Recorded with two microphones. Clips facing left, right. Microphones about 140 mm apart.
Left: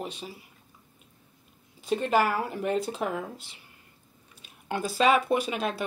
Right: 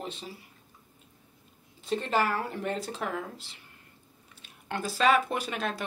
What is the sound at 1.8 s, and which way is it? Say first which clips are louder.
Speech: left 3 dB; 10° left (ahead or behind).